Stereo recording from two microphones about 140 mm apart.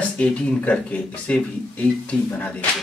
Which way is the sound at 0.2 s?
10° left (ahead or behind).